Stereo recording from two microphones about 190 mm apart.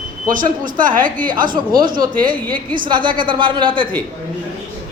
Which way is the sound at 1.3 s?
20° right (ahead or behind).